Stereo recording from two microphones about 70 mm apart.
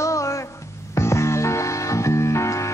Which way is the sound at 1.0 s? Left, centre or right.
Left.